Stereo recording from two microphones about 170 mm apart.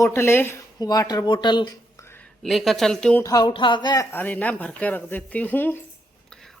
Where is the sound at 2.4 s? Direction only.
Centre (ahead or behind).